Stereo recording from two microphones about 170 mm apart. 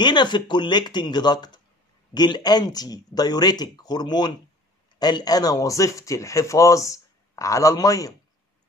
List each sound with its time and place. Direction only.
0.0 s speech: 25° left (ahead or behind)